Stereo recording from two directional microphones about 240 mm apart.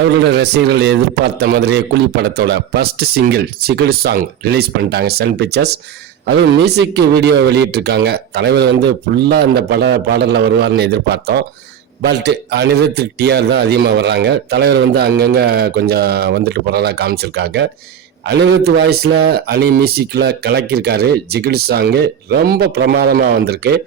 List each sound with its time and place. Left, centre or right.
0.1 s a man's voice: right